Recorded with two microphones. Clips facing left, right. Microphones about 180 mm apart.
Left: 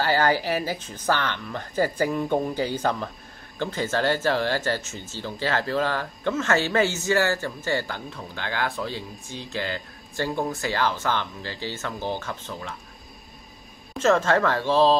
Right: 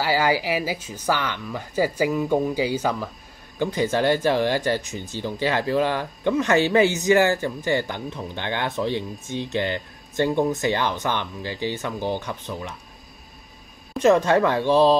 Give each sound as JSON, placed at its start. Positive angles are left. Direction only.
{"t": 0.0, "sound": "speech", "side_deg": -10}
{"t": 13.9, "sound": "speech", "side_deg": -15}